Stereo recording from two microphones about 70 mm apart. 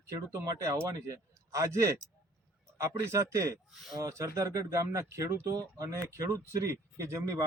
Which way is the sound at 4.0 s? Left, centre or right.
Right.